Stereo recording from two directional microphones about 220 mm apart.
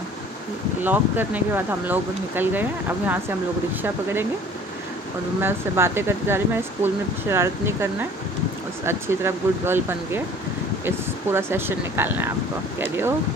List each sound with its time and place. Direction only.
0.8 s speech: 10° right (ahead or behind)
5.4 s speech: 10° right (ahead or behind)
11.3 s speech: 10° right (ahead or behind)